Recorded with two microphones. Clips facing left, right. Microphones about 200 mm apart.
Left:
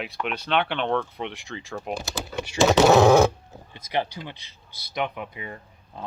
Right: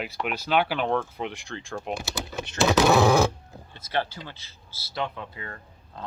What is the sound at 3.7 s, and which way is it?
Speech, 15° left (ahead or behind).